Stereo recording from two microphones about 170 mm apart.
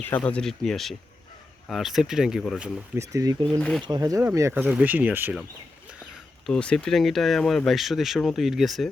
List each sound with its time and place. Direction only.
0.0 s speech: 10° left (ahead or behind)
3.0 s speech: 20° right (ahead or behind)
3.6 s speech: 5° left (ahead or behind)
3.8 s speech: 25° right (ahead or behind)
6.4 s speech: 5° left (ahead or behind)